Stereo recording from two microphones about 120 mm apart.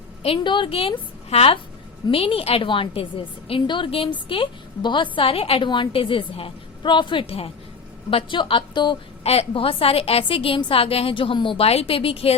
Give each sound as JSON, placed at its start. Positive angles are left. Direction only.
{"t": 0.4, "sound": "a woman's voice", "side_deg": 40}
{"t": 5.6, "sound": "a woman's voice", "side_deg": 40}
{"t": 9.2, "sound": "a woman's voice", "side_deg": 60}